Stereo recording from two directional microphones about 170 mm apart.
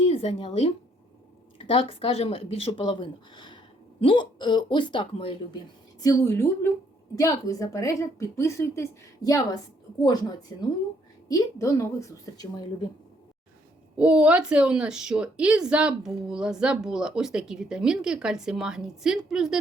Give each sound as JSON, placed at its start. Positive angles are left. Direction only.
{"t": 0.0, "sound": "speech", "side_deg": 35}
{"t": 6.0, "sound": "a woman's voice", "side_deg": 20}
{"t": 13.9, "sound": "a woman's voice", "side_deg": -5}